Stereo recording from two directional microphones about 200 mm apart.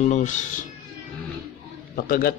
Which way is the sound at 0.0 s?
35° left (ahead or behind).